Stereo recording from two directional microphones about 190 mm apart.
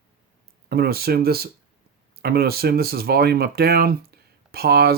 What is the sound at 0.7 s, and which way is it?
Speech, 55° right (ahead or behind).